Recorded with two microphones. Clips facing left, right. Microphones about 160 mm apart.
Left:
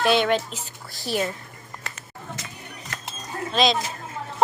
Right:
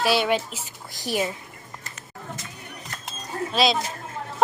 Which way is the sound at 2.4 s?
90° left.